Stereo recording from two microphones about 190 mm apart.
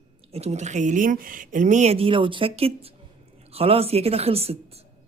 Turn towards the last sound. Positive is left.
turn(degrees=-30)  # may be behind; listen again after turning